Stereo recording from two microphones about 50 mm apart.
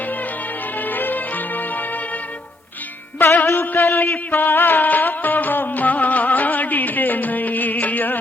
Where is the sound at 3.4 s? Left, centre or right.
Left.